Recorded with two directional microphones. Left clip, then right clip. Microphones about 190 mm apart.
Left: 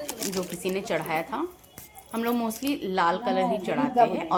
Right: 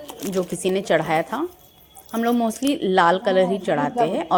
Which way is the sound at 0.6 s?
30° right (ahead or behind).